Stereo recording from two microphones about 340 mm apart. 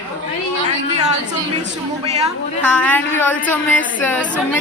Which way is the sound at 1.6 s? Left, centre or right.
Centre.